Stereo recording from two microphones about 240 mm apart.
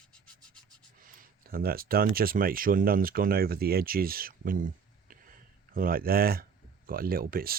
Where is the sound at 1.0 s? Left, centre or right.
Right.